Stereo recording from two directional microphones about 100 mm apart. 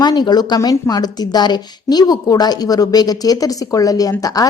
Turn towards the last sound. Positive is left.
turn(degrees=35)  # may be behind; listen again after turning